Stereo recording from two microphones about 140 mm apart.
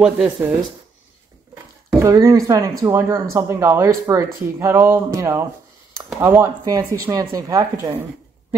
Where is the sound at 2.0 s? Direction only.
20° right (ahead or behind).